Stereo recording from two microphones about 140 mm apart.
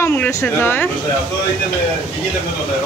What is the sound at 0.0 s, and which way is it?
Speech, 15° left (ahead or behind).